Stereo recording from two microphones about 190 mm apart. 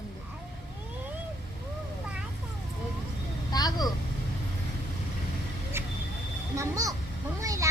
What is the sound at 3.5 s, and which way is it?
Vehicle, 20° left (ahead or behind).